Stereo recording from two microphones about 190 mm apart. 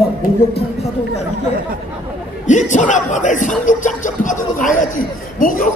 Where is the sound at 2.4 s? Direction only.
40° left (ahead or behind).